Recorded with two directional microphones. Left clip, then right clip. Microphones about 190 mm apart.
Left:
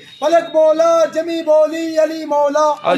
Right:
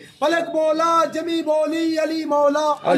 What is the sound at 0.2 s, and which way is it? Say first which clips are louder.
A man's voice: left 7 dB; 5° right (ahead or behind).